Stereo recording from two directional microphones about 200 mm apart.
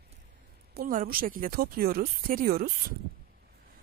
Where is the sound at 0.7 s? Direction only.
45° right (ahead or behind).